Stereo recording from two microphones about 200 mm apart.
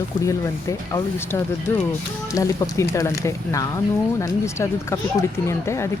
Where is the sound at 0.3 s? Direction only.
15° left (ahead or behind).